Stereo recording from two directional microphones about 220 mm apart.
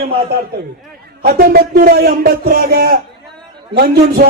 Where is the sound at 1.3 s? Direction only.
40° right (ahead or behind).